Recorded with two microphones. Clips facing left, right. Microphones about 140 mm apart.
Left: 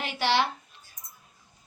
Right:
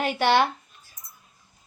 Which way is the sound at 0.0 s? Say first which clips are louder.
Right 5 dB; 50° right (ahead or behind).